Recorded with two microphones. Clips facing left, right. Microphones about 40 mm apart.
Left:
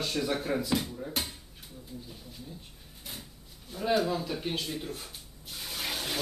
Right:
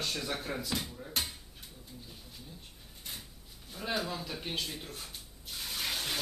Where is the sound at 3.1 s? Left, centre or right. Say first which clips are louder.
Left 2 dB; centre.